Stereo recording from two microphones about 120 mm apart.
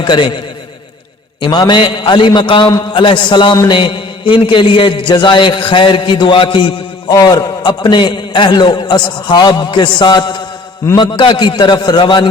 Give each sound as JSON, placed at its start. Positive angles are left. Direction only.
{"t": 0.0, "sound": "a man's voice", "side_deg": 40}
{"t": 1.4, "sound": "a man's voice", "side_deg": 40}
{"t": 7.1, "sound": "a man's voice", "side_deg": 30}